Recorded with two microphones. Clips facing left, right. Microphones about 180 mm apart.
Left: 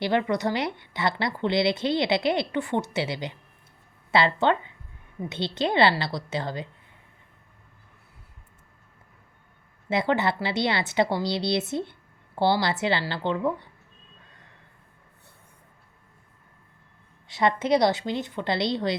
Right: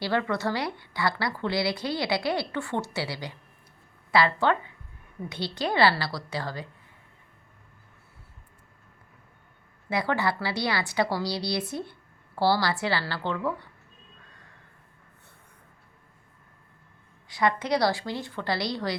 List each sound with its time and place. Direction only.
0.0 s a woman's voice: 20° left (ahead or behind)
9.9 s a woman's voice: 20° left (ahead or behind)
17.2 s a woman's voice: 25° left (ahead or behind)